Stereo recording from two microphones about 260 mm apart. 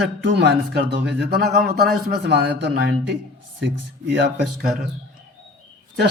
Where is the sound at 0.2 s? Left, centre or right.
Right.